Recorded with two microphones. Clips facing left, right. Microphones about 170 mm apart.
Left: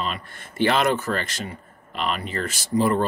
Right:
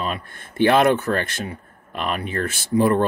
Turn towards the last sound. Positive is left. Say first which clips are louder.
# right 3 dB
turn(degrees=-55)  # may be behind; listen again after turning